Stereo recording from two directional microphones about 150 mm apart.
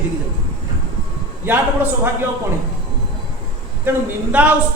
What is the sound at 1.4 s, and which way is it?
Speech, 15° right (ahead or behind).